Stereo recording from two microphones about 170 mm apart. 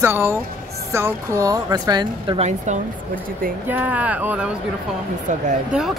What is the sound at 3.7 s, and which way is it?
Speech, 10° right (ahead or behind).